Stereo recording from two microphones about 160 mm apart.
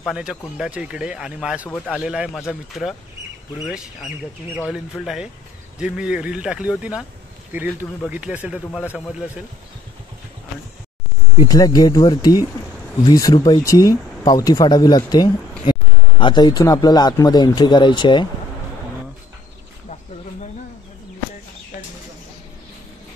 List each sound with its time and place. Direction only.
0.0 s speech: 5° right (ahead or behind)
11.3 s speech: 25° left (ahead or behind)